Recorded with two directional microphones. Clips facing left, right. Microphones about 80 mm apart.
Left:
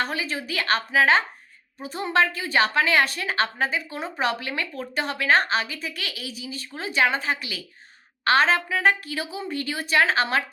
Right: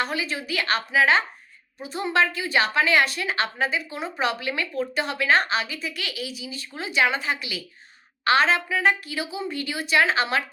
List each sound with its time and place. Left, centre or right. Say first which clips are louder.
0.0 s a woman's voice: even; left